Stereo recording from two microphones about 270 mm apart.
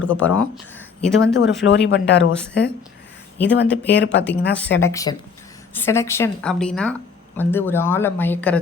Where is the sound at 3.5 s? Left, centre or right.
Left.